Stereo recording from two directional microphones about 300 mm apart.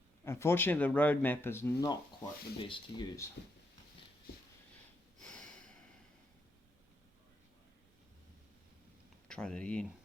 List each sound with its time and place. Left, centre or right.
0.3 s speech: centre
5.2 s snort: centre
9.2 s speech: centre